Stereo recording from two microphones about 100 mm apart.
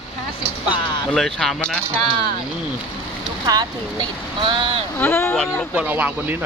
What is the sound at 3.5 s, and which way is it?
Speech, 45° right (ahead or behind).